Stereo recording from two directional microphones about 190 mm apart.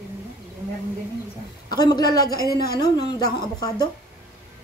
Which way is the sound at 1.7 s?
20° left (ahead or behind).